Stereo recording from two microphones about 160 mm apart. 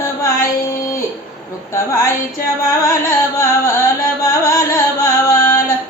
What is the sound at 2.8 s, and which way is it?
Carnatic music, 20° left (ahead or behind).